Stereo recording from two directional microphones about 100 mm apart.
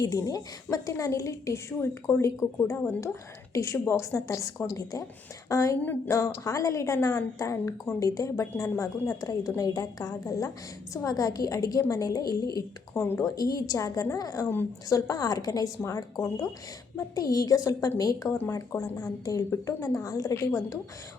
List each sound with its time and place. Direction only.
0.0 s a woman's voice: 35° left (ahead or behind)